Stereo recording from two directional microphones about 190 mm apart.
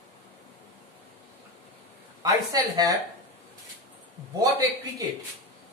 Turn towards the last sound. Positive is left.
turn(degrees=-20)  # may be behind; listen again after turning